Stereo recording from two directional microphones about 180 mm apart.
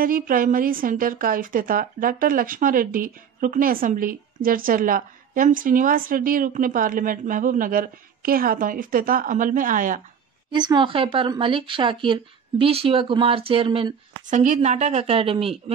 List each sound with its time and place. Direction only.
0.0 s a woman's voice: 50° right (ahead or behind)
10.5 s speech: 25° right (ahead or behind)
14.2 s speech: 40° right (ahead or behind)